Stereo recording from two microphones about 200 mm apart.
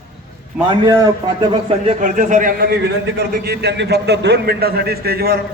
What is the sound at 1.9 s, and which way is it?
A man's voice, 40° right (ahead or behind).